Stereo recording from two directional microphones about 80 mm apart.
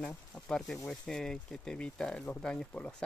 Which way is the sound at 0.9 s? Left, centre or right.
Centre.